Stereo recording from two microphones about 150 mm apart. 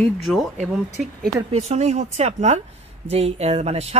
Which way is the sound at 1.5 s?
45° right (ahead or behind).